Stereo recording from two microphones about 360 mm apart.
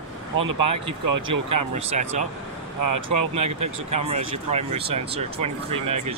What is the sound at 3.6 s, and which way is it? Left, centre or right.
Speech, centre.